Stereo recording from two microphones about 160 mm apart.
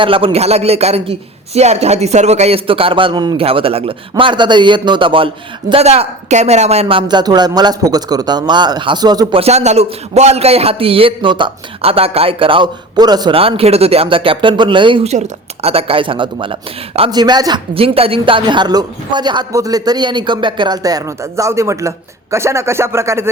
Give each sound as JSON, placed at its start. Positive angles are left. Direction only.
{"t": 0.0, "sound": "a man's voice", "side_deg": -35}
{"t": 9.4, "sound": "a man's voice", "side_deg": -45}